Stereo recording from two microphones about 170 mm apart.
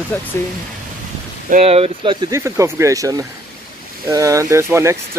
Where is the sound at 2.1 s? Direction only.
20° right (ahead or behind).